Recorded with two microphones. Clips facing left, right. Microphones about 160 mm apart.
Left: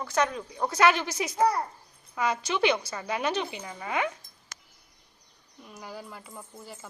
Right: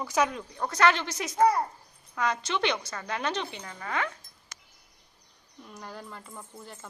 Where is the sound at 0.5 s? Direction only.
10° left (ahead or behind).